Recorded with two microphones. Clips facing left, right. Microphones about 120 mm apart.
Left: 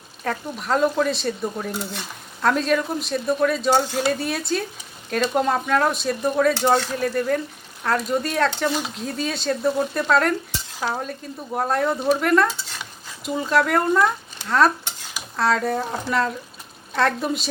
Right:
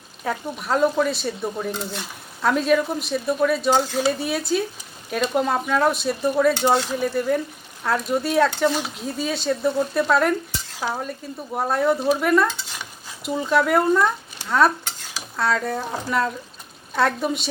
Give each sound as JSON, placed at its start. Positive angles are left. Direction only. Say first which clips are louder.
{"t": 0.3, "sound": "speech", "louder": "even", "side_deg": -5}